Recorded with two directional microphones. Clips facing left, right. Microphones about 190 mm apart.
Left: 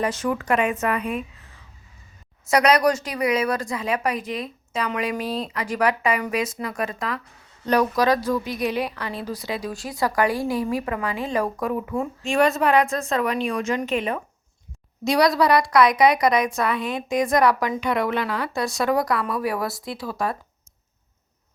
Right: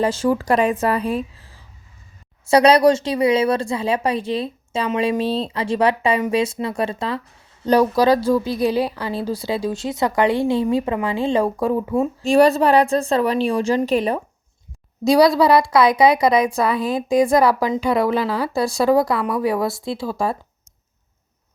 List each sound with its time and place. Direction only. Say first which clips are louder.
0.0 s a woman's voice: right 5 dB; 30° right (ahead or behind)